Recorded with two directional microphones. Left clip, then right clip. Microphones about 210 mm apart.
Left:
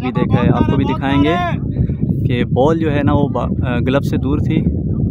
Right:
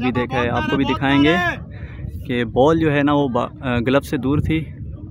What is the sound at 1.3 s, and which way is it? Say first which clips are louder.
Speech: left 1 dB; 55° right (ahead or behind).